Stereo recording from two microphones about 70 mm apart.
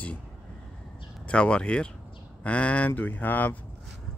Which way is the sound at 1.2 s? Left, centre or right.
Centre.